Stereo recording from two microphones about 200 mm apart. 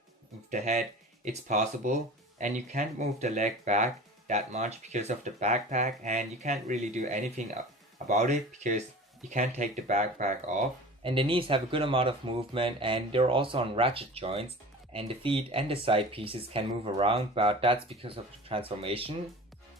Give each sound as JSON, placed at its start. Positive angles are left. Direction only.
{"t": 0.5, "sound": "speech", "side_deg": -35}
{"t": 11.0, "sound": "speech", "side_deg": -25}